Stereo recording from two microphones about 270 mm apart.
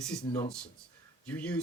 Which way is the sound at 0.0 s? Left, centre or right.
Centre.